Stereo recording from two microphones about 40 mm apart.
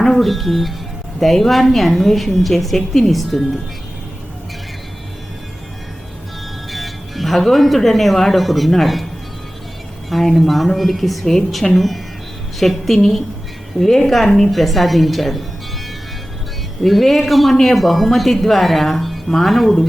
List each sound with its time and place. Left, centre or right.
0.0 s speech: centre
6.7 s speech: centre
10.1 s speech: centre
16.8 s speech: centre